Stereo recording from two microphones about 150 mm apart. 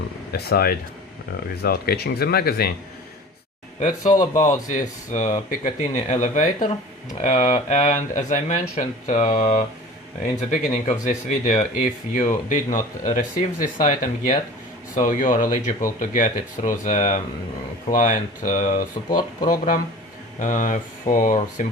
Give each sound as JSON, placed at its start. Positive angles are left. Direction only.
{"t": 0.3, "sound": "speech", "side_deg": 90}
{"t": 3.8, "sound": "speech", "side_deg": 55}